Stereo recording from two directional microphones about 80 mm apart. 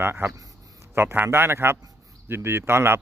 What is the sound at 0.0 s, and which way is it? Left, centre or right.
A man's voice, right.